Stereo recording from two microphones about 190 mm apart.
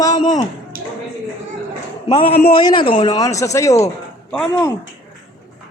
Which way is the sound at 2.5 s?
25° left (ahead or behind).